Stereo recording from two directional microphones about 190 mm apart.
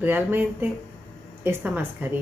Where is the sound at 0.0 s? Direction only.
10° right (ahead or behind).